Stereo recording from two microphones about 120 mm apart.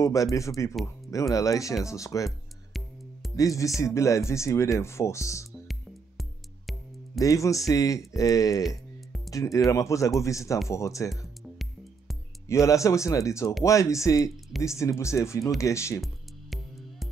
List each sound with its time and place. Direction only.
0.0 s speech: 25° left (ahead or behind)
3.3 s speech: 25° left (ahead or behind)
5.7 s music: centre (ahead or behind)
7.2 s speech: 25° left (ahead or behind)
8.6 s music: centre (ahead or behind)
9.3 s speech: 25° left (ahead or behind)
12.6 s speech: 25° left (ahead or behind)